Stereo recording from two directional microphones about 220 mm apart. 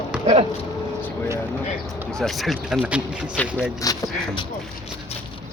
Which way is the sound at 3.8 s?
20° left (ahead or behind).